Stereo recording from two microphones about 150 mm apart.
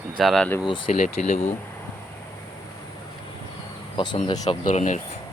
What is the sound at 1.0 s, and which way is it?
Speech, 50° left (ahead or behind).